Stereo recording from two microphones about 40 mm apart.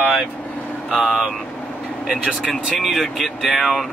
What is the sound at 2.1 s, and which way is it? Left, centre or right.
Speech, right.